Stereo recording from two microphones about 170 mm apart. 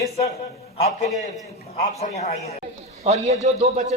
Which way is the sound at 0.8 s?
40° left (ahead or behind).